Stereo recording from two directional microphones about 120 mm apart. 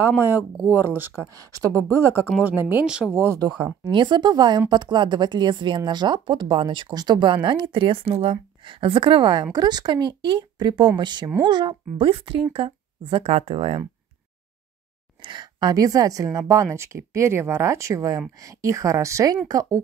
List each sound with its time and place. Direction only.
0.2 s speech: 15° right (ahead or behind)
1.3 s speech: 30° right (ahead or behind); by 3.3 s 10° right (ahead or behind)
3.3 s speech: 25° right (ahead or behind); by 13.8 s 55° right (ahead or behind)
15.2 s speech: 40° right (ahead or behind)